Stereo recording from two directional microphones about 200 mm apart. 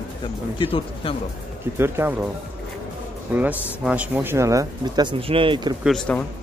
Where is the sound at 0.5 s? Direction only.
25° left (ahead or behind).